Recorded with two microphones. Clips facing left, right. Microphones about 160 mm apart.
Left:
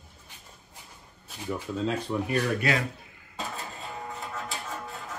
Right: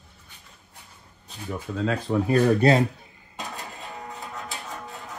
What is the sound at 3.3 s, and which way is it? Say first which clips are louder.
Music: even; 15° right (ahead or behind).